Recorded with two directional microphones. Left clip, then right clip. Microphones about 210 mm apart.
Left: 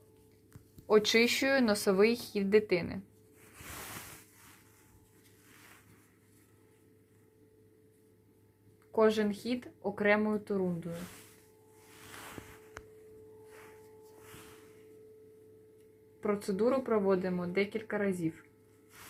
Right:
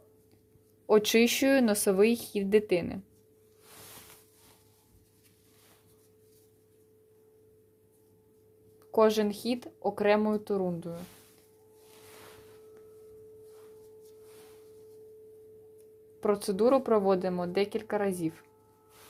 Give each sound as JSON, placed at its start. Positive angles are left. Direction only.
{"t": 0.9, "sound": "speech", "side_deg": -45}
{"t": 8.9, "sound": "speech", "side_deg": -45}
{"t": 16.2, "sound": "speech", "side_deg": -45}